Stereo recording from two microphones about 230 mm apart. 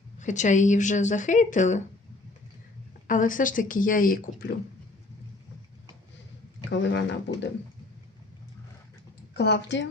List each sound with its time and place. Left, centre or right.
0.2 s speech: left
3.1 s speech: left
6.7 s speech: left
9.3 s speech: left